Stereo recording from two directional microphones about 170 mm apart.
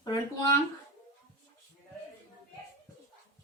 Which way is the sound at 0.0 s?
25° left (ahead or behind).